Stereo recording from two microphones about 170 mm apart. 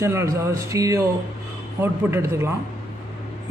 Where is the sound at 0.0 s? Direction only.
15° right (ahead or behind).